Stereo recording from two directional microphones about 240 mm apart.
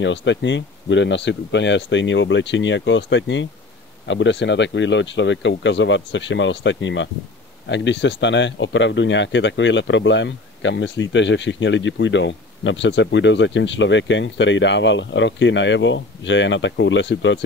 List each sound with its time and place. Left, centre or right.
0.0 s speech: left